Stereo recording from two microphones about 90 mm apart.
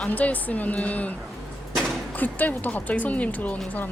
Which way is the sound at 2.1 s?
20° left (ahead or behind).